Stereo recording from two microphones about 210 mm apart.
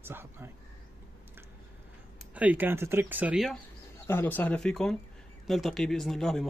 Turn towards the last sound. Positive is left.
turn(degrees=0)  # may be behind; listen again after turning